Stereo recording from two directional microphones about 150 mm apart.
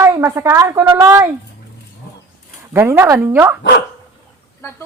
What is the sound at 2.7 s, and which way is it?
Speech, 15° right (ahead or behind).